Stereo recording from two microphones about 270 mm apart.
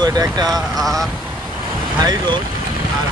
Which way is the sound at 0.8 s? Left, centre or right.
Centre.